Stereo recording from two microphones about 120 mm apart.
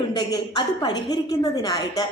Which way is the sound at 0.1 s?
35° left (ahead or behind).